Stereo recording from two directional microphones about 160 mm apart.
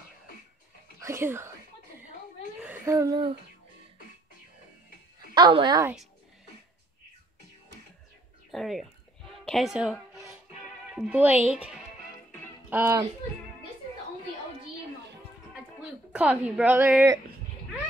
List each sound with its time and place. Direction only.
0.9 s speech: 15° right (ahead or behind)
2.6 s a child's voice: 15° right (ahead or behind)
5.3 s a woman's voice: 30° right (ahead or behind)
8.5 s speech: centre (ahead or behind)
9.4 s music: centre (ahead or behind)
11.1 s speech: 10° right (ahead or behind)
15.8 s a woman's voice: 5° right (ahead or behind)